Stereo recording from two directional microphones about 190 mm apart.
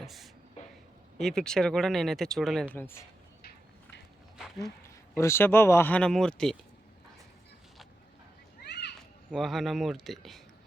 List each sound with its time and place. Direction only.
0.0 s speech: centre (ahead or behind)
2.7 s speech: 10° left (ahead or behind)
4.4 s a sound: centre (ahead or behind)
4.6 s speech: 15° left (ahead or behind)
8.6 s a sound: 60° left (ahead or behind)
9.3 s speech: centre (ahead or behind)